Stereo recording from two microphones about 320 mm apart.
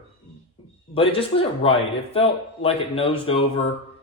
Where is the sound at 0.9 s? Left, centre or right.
Centre.